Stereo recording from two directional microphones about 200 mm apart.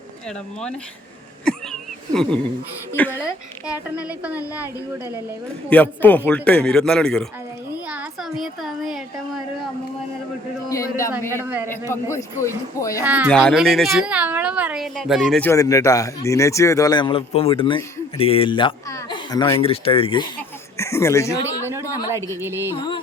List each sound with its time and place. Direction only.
1.5 s a sound: centre (ahead or behind)
3.0 s speech: 10° left (ahead or behind)
3.9 s speech: 5° right (ahead or behind)
5.7 s a woman's voice: 10° left (ahead or behind)
10.7 s speech: 15° left (ahead or behind)
11.4 s speech: 10° right (ahead or behind)
12.1 s speech: 15° left (ahead or behind)
13.0 s a woman's voice: 10° right (ahead or behind)
15.4 s speech: 15° left (ahead or behind)
19.6 s speech: 30° left (ahead or behind)
21.6 s speech: 10° right (ahead or behind)
22.7 s speech: 20° left (ahead or behind)